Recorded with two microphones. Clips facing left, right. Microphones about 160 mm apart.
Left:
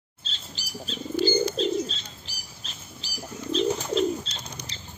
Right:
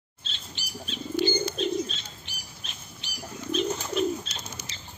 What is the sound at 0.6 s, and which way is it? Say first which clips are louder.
Bird: left 2 dB; 35° left (ahead or behind).